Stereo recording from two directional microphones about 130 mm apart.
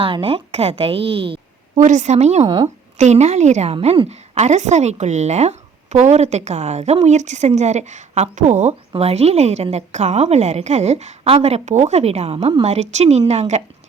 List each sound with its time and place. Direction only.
0.0 s a woman's voice: 45° right (ahead or behind)
1.8 s a woman's voice: 65° right (ahead or behind)
2.4 s speech: 35° right (ahead or behind)
3.0 s a woman's voice: 60° right (ahead or behind)
8.9 s a woman's voice: 50° right (ahead or behind)